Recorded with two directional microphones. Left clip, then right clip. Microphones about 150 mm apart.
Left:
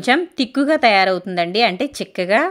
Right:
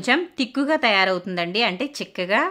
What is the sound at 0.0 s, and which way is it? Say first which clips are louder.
Speech: left 4 dB; 30° left (ahead or behind).